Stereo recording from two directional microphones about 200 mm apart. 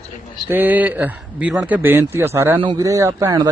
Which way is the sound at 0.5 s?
10° right (ahead or behind).